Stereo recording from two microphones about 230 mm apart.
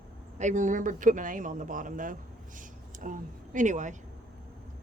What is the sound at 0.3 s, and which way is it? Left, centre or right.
Speech, right.